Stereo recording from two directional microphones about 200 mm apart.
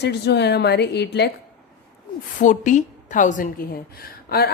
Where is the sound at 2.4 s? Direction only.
40° left (ahead or behind).